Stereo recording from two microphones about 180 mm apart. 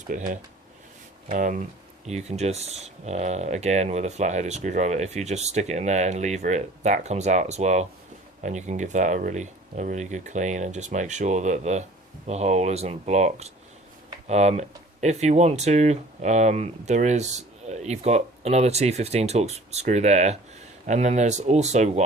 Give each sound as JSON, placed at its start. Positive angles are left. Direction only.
{"t": 0.1, "sound": "speech", "side_deg": -50}